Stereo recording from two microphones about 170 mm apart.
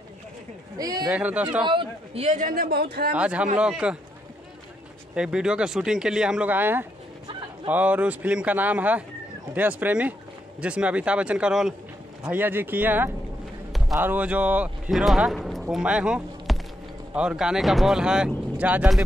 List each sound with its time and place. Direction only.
0.7 s a man's voice: 20° right (ahead or behind)
1.0 s speech: 10° right (ahead or behind)
1.6 s a man's voice: 30° right (ahead or behind)
2.3 s speech: 55° right (ahead or behind)
3.2 s speech: 5° right (ahead or behind)
5.1 s a man's voice: 5° right (ahead or behind)